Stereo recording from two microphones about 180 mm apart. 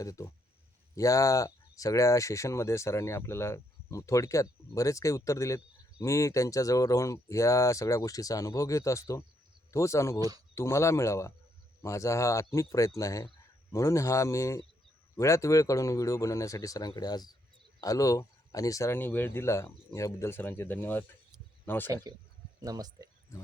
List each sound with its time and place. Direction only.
0.0 s speech: 20° left (ahead or behind)
10.2 s speech: 20° right (ahead or behind)
10.5 s speech: 15° left (ahead or behind)
22.1 s speech: 20° right (ahead or behind)